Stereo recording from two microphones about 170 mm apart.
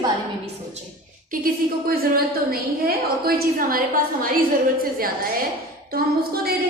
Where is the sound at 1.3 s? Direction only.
60° right (ahead or behind).